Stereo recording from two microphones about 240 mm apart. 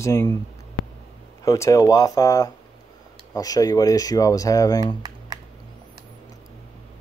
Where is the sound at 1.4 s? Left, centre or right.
Centre.